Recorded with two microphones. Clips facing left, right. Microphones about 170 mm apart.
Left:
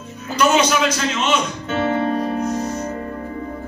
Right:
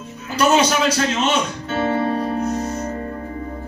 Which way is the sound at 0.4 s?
35° right (ahead or behind).